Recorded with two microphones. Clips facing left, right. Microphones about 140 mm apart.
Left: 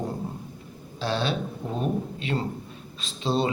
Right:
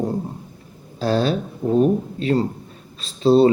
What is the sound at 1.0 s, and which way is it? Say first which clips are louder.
A man's voice: right 7 dB; 40° right (ahead or behind).